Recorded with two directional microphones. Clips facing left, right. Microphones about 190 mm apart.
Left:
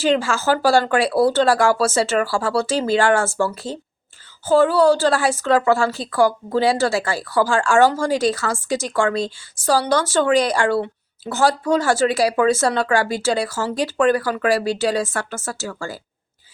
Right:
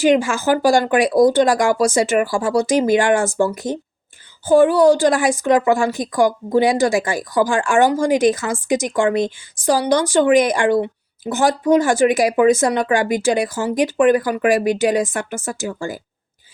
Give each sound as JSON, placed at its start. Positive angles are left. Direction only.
{"t": 0.0, "sound": "a woman's voice", "side_deg": -15}